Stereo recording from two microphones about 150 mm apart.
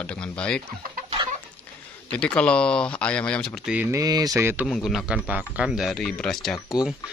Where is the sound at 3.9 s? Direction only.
25° right (ahead or behind).